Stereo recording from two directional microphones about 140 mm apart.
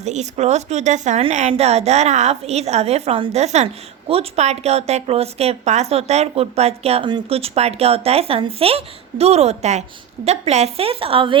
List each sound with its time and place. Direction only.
0.0 s a woman's voice: 55° right (ahead or behind)